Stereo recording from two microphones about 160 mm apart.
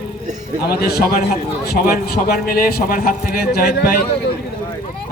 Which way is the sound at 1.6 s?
75° left (ahead or behind).